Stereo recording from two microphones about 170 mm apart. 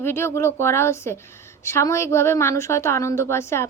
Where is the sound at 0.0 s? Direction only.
15° left (ahead or behind).